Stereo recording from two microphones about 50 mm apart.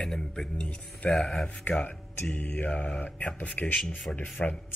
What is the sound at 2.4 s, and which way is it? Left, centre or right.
A man's voice, left.